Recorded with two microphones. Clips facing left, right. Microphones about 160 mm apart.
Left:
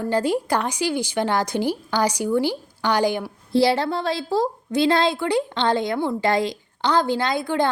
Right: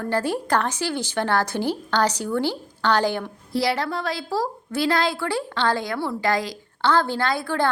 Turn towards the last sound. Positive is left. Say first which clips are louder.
# left 1 dB
turn(degrees=20)  # may be behind; listen again after turning